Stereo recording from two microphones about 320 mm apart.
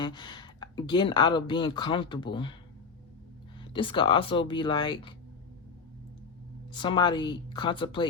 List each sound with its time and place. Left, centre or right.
0.0 s speech: centre
3.6 s speech: centre
6.7 s speech: centre